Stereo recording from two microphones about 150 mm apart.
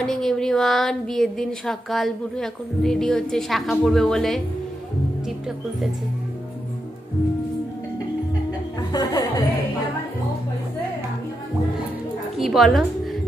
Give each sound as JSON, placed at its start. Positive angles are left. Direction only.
{"t": 0.0, "sound": "a sound", "side_deg": 0}
{"t": 8.9, "sound": "music", "side_deg": 25}
{"t": 12.4, "sound": "a woman's voice", "side_deg": 0}